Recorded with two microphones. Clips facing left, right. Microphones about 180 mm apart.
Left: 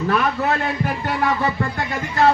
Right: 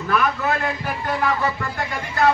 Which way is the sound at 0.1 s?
30° left (ahead or behind).